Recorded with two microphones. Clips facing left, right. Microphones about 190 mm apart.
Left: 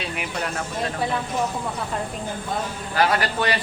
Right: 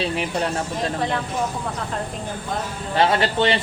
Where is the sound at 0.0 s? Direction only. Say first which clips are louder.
Right 5 dB; 30° right (ahead or behind).